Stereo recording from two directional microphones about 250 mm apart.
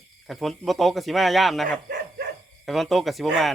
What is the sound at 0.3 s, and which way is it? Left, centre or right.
Speech, centre.